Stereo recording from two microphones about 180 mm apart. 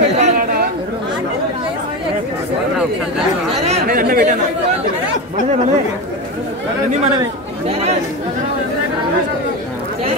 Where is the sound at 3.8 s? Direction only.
55° right (ahead or behind).